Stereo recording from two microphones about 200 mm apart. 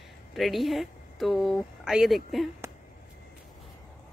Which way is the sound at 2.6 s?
15° right (ahead or behind).